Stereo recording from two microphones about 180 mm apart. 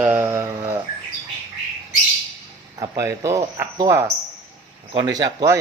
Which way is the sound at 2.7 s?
20° right (ahead or behind).